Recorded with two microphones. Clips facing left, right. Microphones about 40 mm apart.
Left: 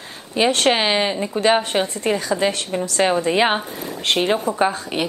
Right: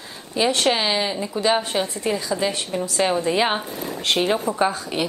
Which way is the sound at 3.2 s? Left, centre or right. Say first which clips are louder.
Left 3 dB; left.